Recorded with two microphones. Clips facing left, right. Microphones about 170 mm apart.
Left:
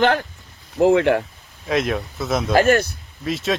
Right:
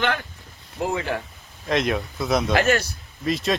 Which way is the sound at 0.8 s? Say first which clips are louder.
Left 11 dB; 70° left (ahead or behind).